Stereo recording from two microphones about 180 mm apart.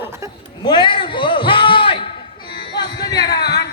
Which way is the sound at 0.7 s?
25° left (ahead or behind).